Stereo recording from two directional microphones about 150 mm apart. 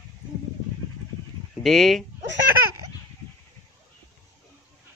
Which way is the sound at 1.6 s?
Centre (ahead or behind).